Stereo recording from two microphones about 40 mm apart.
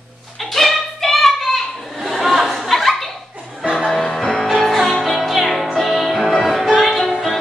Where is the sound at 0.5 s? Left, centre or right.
Centre.